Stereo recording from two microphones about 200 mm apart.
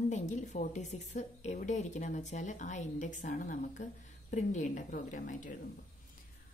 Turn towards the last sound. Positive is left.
turn(degrees=40)  # may be behind; listen again after turning